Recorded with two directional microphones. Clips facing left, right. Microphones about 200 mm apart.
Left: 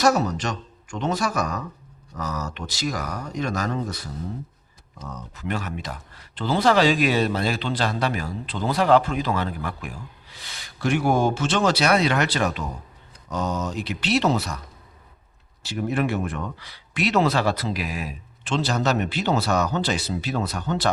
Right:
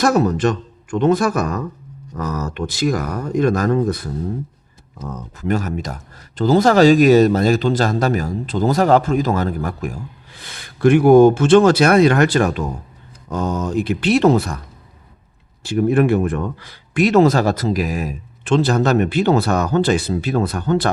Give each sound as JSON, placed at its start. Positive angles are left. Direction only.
{"t": 0.0, "sound": "speech", "side_deg": -55}
{"t": 15.6, "sound": "speech", "side_deg": -50}